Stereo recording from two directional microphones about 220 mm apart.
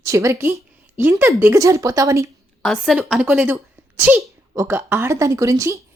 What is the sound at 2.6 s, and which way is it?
Speech, centre (ahead or behind).